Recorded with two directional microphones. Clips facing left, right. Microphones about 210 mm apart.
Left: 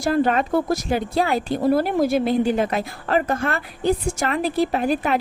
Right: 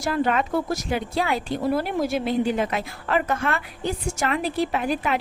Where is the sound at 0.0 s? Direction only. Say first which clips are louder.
Left 4 dB; 40° left (ahead or behind).